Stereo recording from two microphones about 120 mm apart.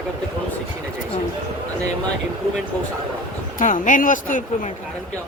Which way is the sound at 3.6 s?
90° left.